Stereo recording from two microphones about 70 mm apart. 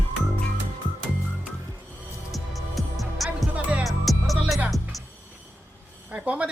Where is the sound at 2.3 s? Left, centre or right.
Centre.